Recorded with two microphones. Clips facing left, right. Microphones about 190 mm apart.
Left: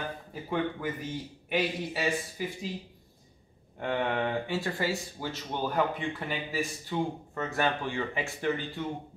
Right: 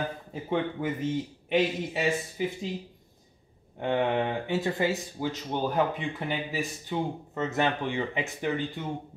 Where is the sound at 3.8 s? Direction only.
20° right (ahead or behind).